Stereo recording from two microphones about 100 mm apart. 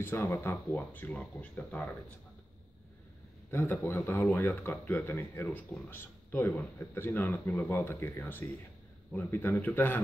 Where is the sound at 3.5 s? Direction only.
25° left (ahead or behind).